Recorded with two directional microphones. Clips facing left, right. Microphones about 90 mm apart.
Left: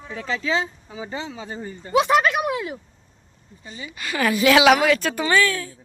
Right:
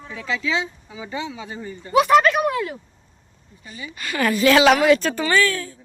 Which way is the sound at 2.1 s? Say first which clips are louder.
Right 3 dB; 10° left (ahead or behind).